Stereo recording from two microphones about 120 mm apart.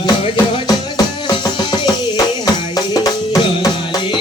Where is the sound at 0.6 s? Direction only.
35° left (ahead or behind).